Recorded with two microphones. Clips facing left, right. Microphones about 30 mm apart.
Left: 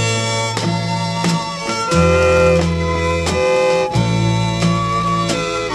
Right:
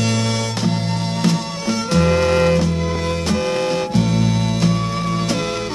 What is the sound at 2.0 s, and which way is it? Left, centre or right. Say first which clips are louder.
Music: left 4 dB; left.